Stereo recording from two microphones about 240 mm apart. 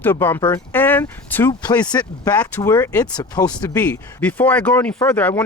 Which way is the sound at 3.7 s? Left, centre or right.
Centre.